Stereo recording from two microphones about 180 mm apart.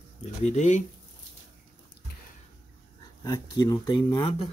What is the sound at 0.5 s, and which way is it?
Speech, 40° left (ahead or behind).